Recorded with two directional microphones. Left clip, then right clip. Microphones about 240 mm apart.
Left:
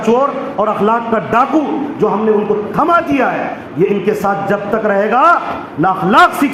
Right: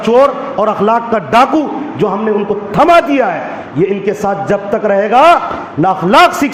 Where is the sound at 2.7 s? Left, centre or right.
Right.